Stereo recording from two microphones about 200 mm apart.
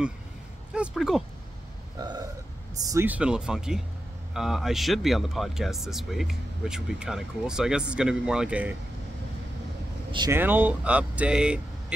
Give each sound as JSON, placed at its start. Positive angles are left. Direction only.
{"t": 0.7, "sound": "speech", "side_deg": 0}
{"t": 2.0, "sound": "burping", "side_deg": -20}
{"t": 2.8, "sound": "speech", "side_deg": -15}
{"t": 10.1, "sound": "speech", "side_deg": -20}
{"t": 10.4, "sound": "speech", "side_deg": -10}